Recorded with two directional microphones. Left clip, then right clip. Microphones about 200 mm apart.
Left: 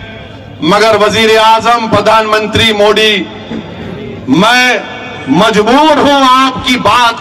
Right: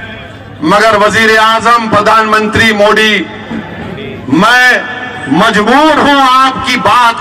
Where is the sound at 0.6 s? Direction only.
35° left (ahead or behind).